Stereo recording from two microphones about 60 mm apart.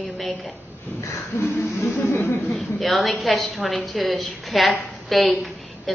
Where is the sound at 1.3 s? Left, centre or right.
Left.